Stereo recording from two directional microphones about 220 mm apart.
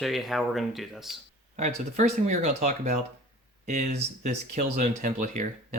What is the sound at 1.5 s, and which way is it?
Speech, 35° right (ahead or behind).